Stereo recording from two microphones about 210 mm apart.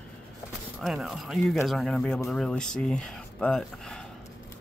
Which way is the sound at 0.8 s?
Centre (ahead or behind).